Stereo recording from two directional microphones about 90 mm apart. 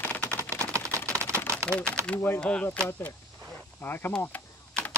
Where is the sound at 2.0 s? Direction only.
30° right (ahead or behind).